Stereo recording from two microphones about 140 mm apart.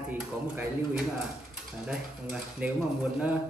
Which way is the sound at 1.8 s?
5° right (ahead or behind).